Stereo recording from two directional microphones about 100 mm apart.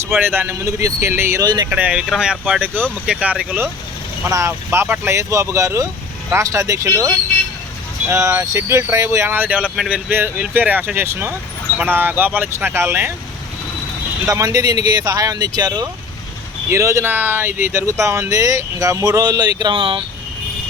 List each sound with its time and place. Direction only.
0.2 s speech: 20° right (ahead or behind)
1.4 s speech: 40° right (ahead or behind)
1.7 s speech: 10° right (ahead or behind)
4.3 s speech: 30° right (ahead or behind)
8.1 s speech: 30° right (ahead or behind)
14.3 s speech: 35° right (ahead or behind)
16.6 s speech: 30° right (ahead or behind)
19.7 s speech: 60° right (ahead or behind)